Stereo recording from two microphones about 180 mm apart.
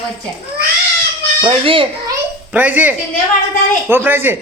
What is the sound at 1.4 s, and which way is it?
Speech, 30° right (ahead or behind).